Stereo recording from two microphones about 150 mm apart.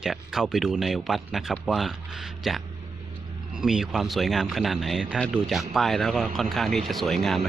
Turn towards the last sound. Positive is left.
turn(degrees=0)  # may be behind; listen again after turning